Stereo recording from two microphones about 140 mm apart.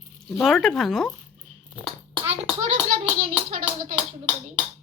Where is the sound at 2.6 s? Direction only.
60° right (ahead or behind).